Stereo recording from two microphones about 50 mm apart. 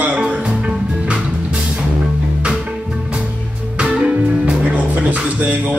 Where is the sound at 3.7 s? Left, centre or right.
Right.